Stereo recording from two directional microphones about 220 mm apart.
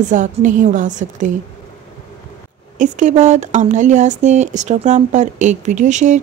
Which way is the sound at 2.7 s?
35° right (ahead or behind).